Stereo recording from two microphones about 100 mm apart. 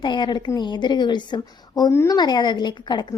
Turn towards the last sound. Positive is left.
turn(degrees=50)  # may be behind; listen again after turning